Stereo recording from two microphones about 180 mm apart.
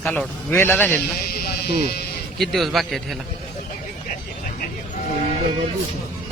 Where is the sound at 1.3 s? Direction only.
60° left (ahead or behind).